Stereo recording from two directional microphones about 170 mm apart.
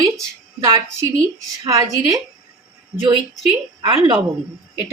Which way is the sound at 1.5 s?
20° right (ahead or behind).